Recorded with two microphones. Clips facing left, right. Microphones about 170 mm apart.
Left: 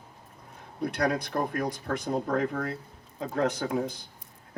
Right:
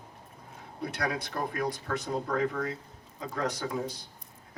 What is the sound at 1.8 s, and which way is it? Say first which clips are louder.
Speech: left 3 dB; 45° left (ahead or behind).